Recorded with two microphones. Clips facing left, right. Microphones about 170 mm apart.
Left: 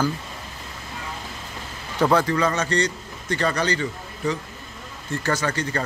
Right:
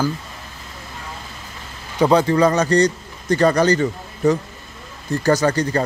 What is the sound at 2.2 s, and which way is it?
A man's voice, 35° right (ahead or behind).